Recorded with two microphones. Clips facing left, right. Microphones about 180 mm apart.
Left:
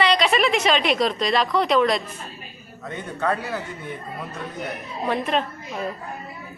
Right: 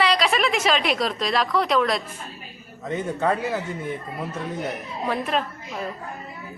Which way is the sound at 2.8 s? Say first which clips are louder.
Right 2 dB; 25° right (ahead or behind).